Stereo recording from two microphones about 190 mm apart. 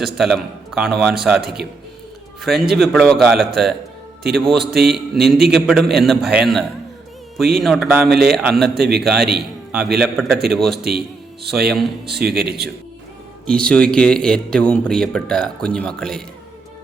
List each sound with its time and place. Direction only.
0.0 s speech: centre (ahead or behind)
2.7 s a man's voice: centre (ahead or behind)
12.3 s speech: 55° right (ahead or behind)
13.5 s speech: 5° left (ahead or behind)